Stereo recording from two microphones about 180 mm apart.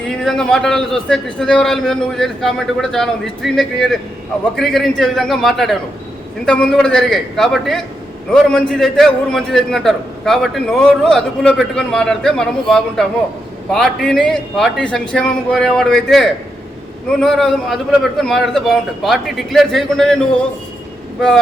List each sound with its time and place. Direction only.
0.3 s a man's voice: 5° left (ahead or behind)